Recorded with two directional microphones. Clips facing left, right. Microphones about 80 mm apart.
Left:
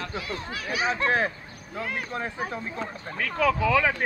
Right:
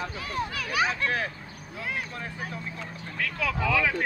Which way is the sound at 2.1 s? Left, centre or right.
Left.